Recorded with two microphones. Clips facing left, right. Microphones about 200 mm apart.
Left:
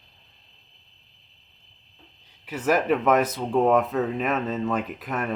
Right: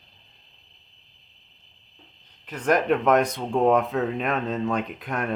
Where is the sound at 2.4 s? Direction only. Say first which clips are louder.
Even; 5° left (ahead or behind).